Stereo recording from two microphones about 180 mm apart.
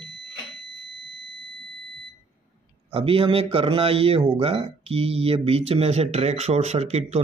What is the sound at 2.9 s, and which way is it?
Speech, 30° right (ahead or behind).